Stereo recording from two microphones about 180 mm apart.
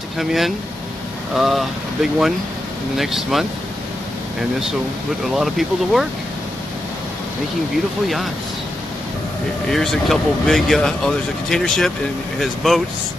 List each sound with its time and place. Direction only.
0.2 s speech: centre (ahead or behind)
5.2 s speech: centre (ahead or behind)
9.7 s speech: centre (ahead or behind)